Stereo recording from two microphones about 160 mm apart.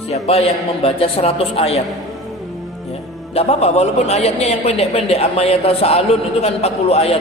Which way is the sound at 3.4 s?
40° left (ahead or behind).